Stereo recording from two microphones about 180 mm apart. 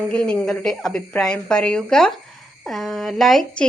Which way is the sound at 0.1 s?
5° left (ahead or behind).